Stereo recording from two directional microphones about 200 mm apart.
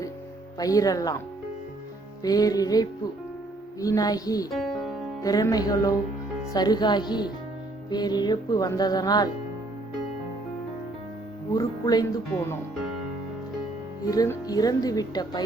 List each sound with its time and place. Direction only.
0.6 s music: 15° left (ahead or behind)
2.2 s music: 20° left (ahead or behind)
4.5 s music: centre (ahead or behind)
5.2 s music: 15° left (ahead or behind)
6.5 s speech: 20° left (ahead or behind)
11.5 s music: 20° left (ahead or behind)
14.1 s speech: 20° left (ahead or behind)